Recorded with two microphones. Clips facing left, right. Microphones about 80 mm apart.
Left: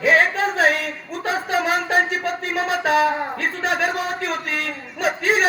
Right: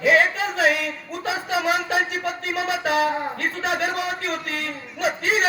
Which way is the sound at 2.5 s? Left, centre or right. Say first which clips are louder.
Left 3 dB; left.